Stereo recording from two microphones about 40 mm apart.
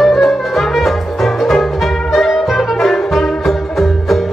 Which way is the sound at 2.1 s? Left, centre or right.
Centre.